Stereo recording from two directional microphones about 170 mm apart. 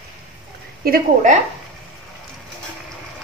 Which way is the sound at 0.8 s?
55° right (ahead or behind).